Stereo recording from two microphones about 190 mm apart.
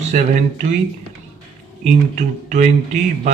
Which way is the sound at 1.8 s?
40° right (ahead or behind).